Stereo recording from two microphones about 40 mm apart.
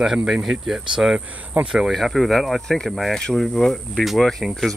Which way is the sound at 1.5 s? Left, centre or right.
Right.